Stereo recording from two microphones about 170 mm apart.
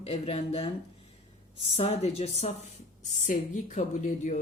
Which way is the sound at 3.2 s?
45° left (ahead or behind).